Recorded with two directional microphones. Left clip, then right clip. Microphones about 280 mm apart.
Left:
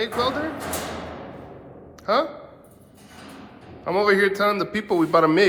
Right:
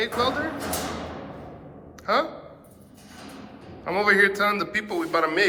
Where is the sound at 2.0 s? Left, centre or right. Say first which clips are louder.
Left 2 dB; centre.